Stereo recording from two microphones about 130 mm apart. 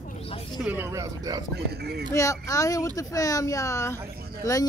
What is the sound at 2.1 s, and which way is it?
Speech, 25° left (ahead or behind).